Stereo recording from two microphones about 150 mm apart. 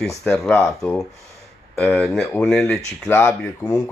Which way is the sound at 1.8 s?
5° left (ahead or behind).